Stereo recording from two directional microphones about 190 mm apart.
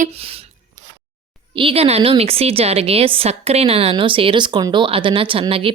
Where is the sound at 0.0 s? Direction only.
30° right (ahead or behind).